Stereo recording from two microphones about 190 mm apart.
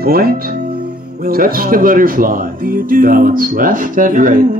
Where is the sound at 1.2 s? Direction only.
50° right (ahead or behind).